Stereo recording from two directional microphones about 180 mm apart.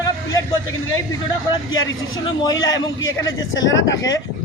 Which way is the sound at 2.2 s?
20° left (ahead or behind).